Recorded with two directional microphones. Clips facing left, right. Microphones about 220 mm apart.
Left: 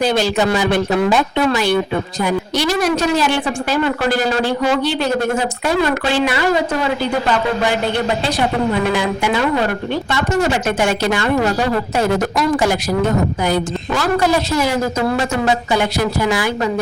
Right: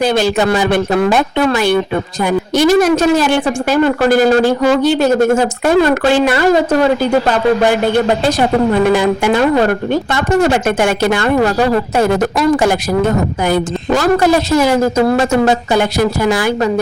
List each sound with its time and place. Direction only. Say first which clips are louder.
0.0 s a woman's voice: right 3 dB; 55° right (ahead or behind)
8.9 s a woman's voice: right 6 dB; 50° right (ahead or behind)